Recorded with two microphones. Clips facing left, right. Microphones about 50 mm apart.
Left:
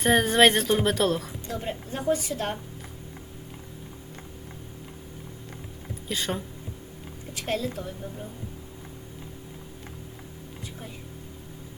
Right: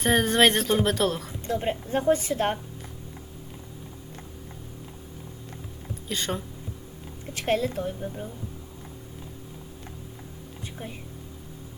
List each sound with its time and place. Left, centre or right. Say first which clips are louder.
0.0 s a woman's voice: left 1 dB; centre
1.5 s a woman's voice: right 8 dB; right
6.1 s a woman's voice: even; centre
7.3 s a woman's voice: right 4 dB; right
10.8 s a woman's voice: right 6 dB; right